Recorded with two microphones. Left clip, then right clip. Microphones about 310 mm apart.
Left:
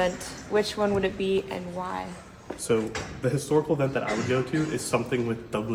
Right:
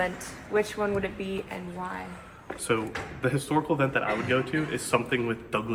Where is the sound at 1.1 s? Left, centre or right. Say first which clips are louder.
Left 8 dB; centre.